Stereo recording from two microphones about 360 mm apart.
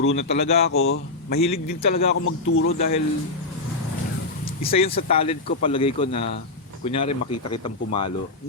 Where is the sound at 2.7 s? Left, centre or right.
Centre.